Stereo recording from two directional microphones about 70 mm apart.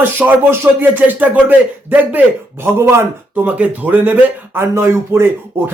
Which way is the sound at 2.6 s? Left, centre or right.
Right.